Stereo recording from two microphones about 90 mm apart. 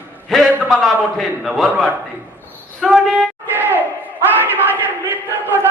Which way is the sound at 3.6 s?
20° right (ahead or behind).